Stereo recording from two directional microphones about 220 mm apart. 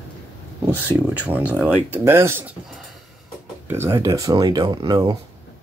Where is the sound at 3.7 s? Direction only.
10° right (ahead or behind).